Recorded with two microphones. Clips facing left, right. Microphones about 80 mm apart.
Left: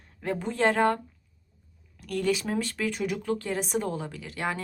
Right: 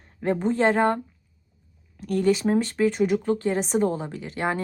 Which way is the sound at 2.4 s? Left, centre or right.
Right.